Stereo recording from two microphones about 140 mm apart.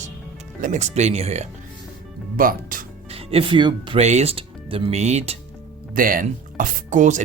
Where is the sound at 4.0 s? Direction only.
50° right (ahead or behind).